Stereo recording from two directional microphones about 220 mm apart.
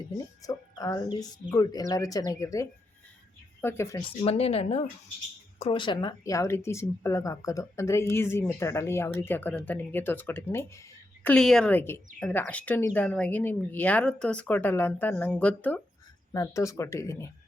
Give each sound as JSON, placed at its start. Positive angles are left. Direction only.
{"t": 0.4, "sound": "a woman's voice", "side_deg": 15}
{"t": 4.2, "sound": "a woman's voice", "side_deg": 25}